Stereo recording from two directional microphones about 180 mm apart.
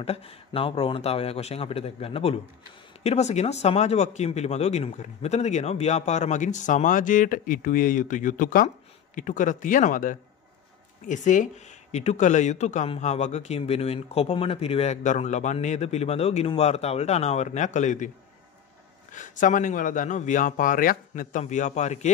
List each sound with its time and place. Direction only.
0.0 s speech: 35° left (ahead or behind)
19.1 s speech: 45° left (ahead or behind)